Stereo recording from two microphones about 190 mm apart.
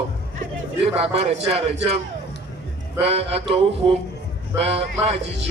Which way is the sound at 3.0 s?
30° right (ahead or behind).